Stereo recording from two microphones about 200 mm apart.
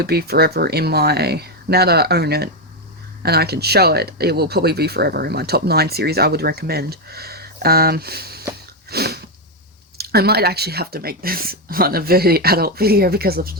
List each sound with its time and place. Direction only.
0.0 s speech: 50° right (ahead or behind)
8.9 s a sound: 50° right (ahead or behind)
10.0 s speech: 50° right (ahead or behind)